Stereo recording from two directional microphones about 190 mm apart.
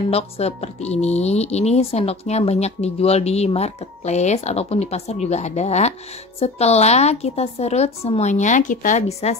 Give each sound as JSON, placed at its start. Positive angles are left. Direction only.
{"t": 0.1, "sound": "speech", "side_deg": 35}